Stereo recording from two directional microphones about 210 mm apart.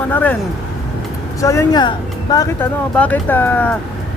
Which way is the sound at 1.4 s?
15° left (ahead or behind).